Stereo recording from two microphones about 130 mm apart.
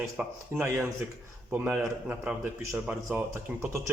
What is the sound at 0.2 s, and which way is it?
Speech, 10° right (ahead or behind).